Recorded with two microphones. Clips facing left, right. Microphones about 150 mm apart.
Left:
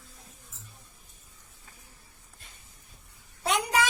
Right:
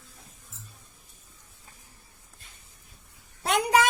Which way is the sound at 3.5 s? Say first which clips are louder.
Right 4 dB; 65° right (ahead or behind).